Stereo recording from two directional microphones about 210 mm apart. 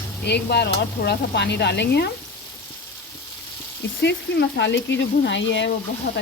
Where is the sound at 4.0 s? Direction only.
55° left (ahead or behind).